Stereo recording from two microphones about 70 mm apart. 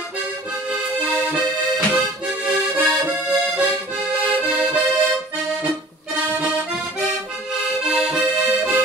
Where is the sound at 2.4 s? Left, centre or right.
Centre.